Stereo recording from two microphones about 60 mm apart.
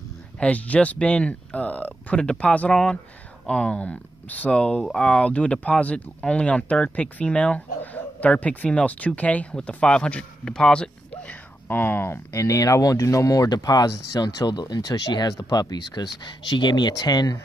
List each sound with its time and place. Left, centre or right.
0.4 s speech: left
2.7 s speech: centre
11.6 s speech: left
12.3 s speech: left